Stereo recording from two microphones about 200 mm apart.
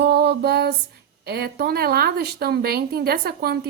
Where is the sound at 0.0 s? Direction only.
55° right (ahead or behind).